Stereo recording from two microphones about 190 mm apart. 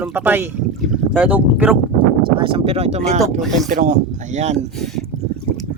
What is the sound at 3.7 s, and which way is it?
Speech, 45° right (ahead or behind).